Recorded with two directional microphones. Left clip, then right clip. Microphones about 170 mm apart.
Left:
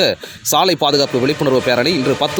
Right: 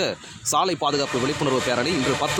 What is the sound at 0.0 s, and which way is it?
Speech, 30° left (ahead or behind).